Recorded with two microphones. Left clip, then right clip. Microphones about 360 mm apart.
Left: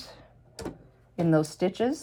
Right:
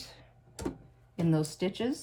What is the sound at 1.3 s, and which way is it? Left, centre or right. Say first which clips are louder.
Speech: left 6 dB; centre.